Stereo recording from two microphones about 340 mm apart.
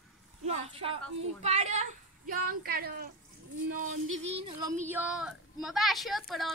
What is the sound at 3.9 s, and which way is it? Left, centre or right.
Music, right.